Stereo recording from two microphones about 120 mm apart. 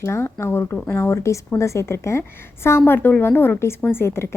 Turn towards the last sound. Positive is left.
turn(degrees=20)  # may be behind; listen again after turning